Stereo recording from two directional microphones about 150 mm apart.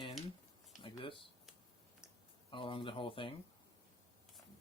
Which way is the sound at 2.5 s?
35° left (ahead or behind).